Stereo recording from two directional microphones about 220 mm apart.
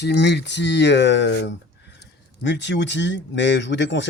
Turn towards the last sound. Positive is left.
turn(degrees=55)  # may be behind; listen again after turning